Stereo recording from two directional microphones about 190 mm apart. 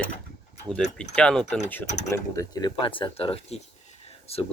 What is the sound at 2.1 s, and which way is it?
Speech, 15° left (ahead or behind).